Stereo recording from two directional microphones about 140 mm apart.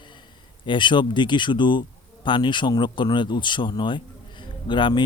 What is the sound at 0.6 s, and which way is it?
Speech, 35° left (ahead or behind).